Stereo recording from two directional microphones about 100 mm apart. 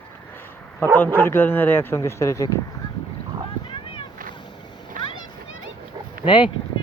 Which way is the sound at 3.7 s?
55° left (ahead or behind).